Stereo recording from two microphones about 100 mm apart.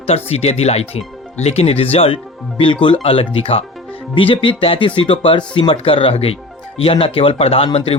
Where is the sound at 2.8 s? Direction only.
65° left (ahead or behind).